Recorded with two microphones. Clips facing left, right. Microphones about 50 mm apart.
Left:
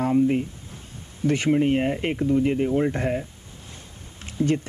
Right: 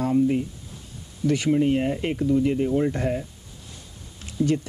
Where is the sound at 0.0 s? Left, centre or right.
Left.